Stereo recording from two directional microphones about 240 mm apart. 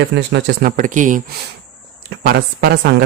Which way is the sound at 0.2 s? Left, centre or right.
Right.